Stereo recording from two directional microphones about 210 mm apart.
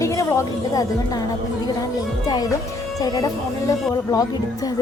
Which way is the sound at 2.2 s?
20° left (ahead or behind).